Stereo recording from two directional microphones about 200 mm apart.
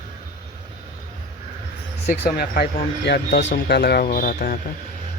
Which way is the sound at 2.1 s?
55° left (ahead or behind).